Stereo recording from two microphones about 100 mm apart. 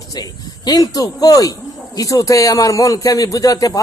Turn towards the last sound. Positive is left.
turn(degrees=35)  # may be behind; listen again after turning